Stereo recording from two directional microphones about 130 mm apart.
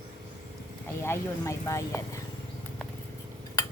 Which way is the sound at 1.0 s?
20° left (ahead or behind).